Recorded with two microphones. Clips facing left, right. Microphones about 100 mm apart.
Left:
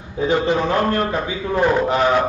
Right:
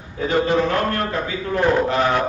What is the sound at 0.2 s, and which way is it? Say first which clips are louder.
A man's voice: left 1 dB; 25° left (ahead or behind).